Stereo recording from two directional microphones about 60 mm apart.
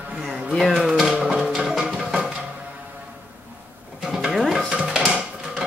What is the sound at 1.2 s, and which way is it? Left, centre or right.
Music, centre.